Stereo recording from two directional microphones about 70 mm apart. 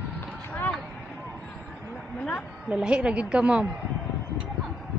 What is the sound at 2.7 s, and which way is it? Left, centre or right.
Speech, centre.